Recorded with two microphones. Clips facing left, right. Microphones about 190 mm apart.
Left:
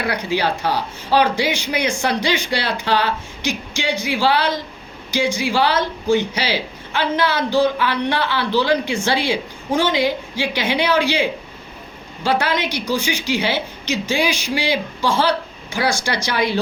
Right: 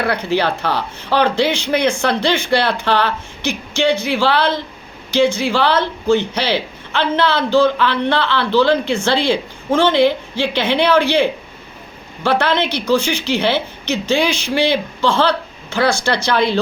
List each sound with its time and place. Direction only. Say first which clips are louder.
0.1 s speech: right 3 dB; 10° left (ahead or behind)
2.5 s speech: right 6 dB; 55° right (ahead or behind)
2.8 s speech: right 2 dB; 15° left (ahead or behind)
12.4 s speech: right 4 dB; 10° left (ahead or behind)